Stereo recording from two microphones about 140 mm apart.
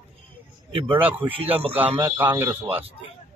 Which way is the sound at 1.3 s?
45° right (ahead or behind).